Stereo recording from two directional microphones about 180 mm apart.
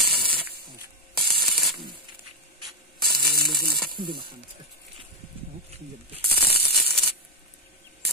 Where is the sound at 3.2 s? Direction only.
60° right (ahead or behind).